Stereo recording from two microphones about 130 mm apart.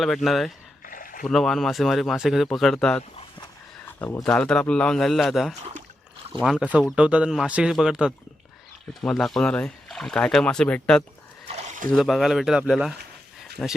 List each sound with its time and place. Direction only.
0.0 s speech: centre (ahead or behind)
0.9 s rowboat: 90° left
1.2 s speech: centre (ahead or behind)
4.0 s speech: 15° left (ahead or behind)
11.5 s a sound: 65° right (ahead or behind)
11.9 s speech: centre (ahead or behind)
13.6 s speech: 10° left (ahead or behind)